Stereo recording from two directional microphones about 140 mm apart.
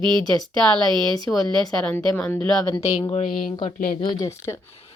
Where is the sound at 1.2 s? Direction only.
Centre (ahead or behind).